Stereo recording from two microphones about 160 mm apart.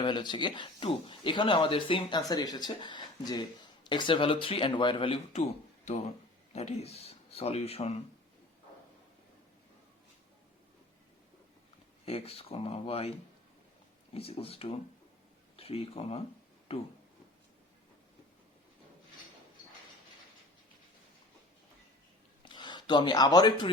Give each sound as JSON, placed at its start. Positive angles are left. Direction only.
{"t": 0.0, "sound": "speech", "side_deg": 30}
{"t": 12.0, "sound": "speech", "side_deg": 40}
{"t": 22.4, "sound": "speech", "side_deg": 30}